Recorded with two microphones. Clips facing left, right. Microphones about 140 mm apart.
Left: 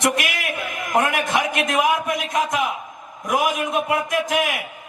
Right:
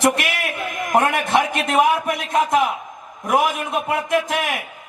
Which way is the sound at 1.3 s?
30° right (ahead or behind).